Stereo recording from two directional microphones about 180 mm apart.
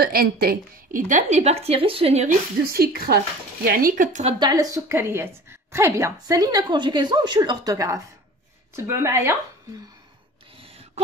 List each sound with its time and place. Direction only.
0.0 s a woman's voice: 55° right (ahead or behind); by 2.3 s 35° right (ahead or behind)
2.6 s a woman's voice: 55° right (ahead or behind); by 4.4 s 40° right (ahead or behind)
4.4 s a woman's voice: 20° right (ahead or behind)
10.6 s a sound: 30° right (ahead or behind)